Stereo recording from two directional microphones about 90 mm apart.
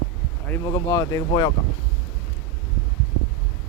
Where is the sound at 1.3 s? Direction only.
55° left (ahead or behind).